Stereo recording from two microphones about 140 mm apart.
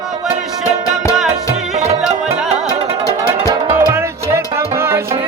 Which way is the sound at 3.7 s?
20° right (ahead or behind).